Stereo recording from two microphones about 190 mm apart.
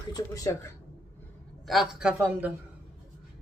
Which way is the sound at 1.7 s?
Centre (ahead or behind).